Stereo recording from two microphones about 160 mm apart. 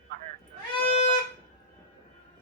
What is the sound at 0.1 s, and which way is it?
Music, 65° right (ahead or behind).